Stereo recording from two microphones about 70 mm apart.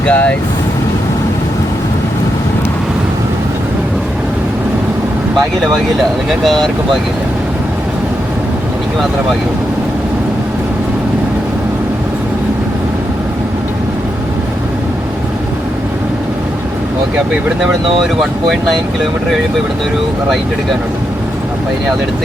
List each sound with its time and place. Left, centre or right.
0.0 s speech: centre
6.4 s speech: centre
17.6 s speech: centre